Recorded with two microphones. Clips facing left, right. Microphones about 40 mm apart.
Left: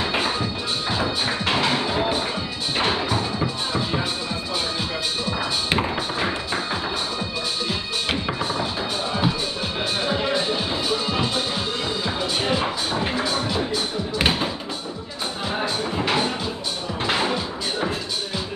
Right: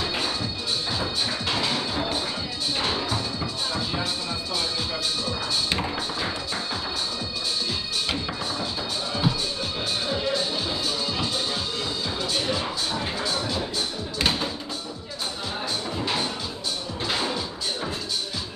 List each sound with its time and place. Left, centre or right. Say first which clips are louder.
0.0 s music: left 4 dB; left
5.7 s music: left 4 dB; left
10.0 s music: left 4 dB; left
14.1 s tap: left 3 dB; left
15.6 s music: left 4 dB; left